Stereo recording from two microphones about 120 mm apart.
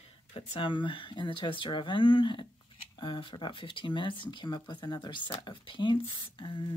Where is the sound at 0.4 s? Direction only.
60° left (ahead or behind).